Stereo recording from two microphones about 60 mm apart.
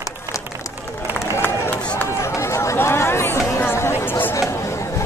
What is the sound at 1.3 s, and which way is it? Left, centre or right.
Run, left.